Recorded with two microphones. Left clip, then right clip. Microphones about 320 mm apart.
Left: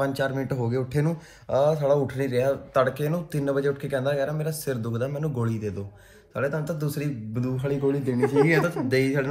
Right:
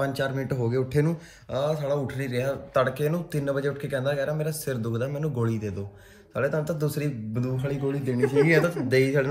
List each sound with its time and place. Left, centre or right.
0.0 s speech: centre
1.5 s speech: centre